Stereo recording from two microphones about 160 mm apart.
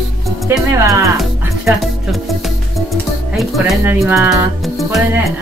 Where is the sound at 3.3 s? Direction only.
Centre (ahead or behind).